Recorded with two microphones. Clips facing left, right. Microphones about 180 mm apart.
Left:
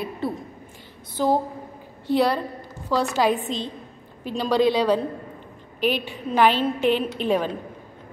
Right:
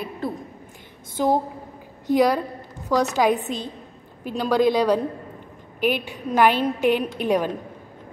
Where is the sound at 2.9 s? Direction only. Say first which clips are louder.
Right 2 dB; 15° right (ahead or behind).